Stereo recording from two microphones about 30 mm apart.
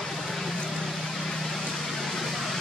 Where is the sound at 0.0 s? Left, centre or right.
Centre.